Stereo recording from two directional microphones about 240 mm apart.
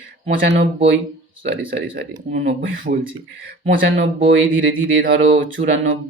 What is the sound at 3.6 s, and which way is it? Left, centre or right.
Speech, right.